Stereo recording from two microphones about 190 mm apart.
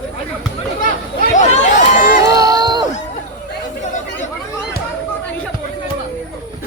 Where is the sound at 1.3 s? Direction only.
40° left (ahead or behind).